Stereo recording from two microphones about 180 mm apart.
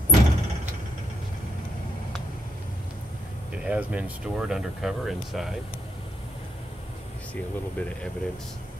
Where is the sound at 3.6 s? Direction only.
5° right (ahead or behind).